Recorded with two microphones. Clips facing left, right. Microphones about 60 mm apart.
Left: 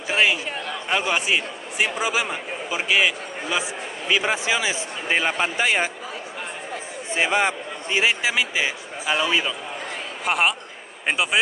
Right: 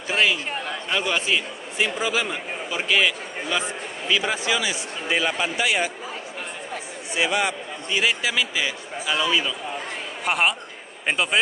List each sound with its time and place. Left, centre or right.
0.1 s a sound: left
0.8 s a man's voice: centre
4.2 s speech: left
7.2 s a man's voice: left
10.2 s speech: centre